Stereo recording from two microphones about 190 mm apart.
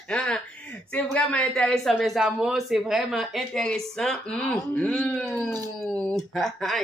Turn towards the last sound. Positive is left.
turn(degrees=0)  # may be behind; listen again after turning